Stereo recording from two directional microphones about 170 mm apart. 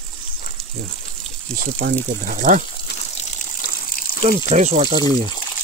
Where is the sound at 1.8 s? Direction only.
90° right.